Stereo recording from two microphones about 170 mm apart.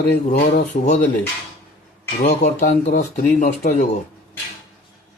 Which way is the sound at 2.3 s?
45° left (ahead or behind).